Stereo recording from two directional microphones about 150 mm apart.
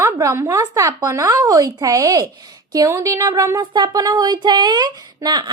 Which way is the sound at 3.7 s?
35° right (ahead or behind).